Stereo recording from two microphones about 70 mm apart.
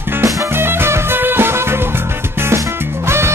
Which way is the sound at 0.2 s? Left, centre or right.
Right.